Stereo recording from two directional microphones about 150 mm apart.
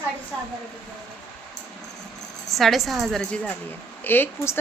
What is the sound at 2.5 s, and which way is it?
Speech, centre (ahead or behind).